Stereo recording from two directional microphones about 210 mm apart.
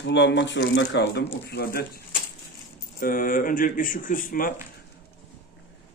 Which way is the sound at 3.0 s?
40° left (ahead or behind).